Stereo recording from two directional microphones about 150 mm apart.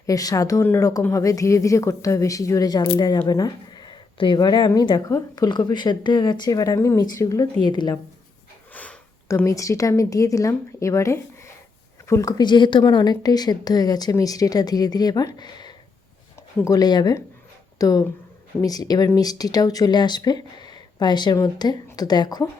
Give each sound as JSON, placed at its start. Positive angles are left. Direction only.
{"t": 0.0, "sound": "speech", "side_deg": 25}
{"t": 8.7, "sound": "a sound", "side_deg": 10}
{"t": 9.3, "sound": "speech", "side_deg": 20}